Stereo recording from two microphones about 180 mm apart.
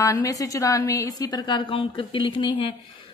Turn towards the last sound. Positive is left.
turn(degrees=25)  # may be behind; listen again after turning